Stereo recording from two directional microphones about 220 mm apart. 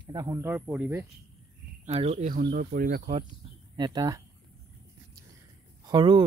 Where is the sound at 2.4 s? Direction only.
40° right (ahead or behind).